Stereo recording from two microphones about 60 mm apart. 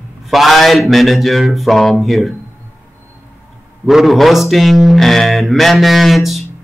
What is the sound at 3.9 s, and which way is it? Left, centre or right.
Speech, centre.